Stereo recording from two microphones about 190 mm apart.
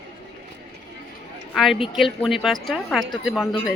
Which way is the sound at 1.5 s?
Centre (ahead or behind).